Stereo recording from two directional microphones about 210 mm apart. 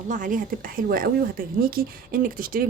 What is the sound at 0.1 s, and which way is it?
A woman's voice, 40° right (ahead or behind).